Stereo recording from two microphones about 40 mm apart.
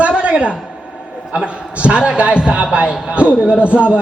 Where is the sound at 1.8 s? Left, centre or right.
Right.